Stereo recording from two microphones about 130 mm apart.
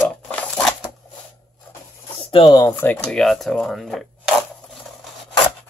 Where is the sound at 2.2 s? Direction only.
40° left (ahead or behind).